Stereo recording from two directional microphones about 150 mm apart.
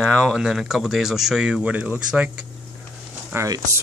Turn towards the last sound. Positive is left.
turn(degrees=-20)  # may be behind; listen again after turning